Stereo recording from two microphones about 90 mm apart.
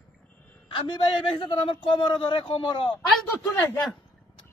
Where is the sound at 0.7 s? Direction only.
60° left (ahead or behind).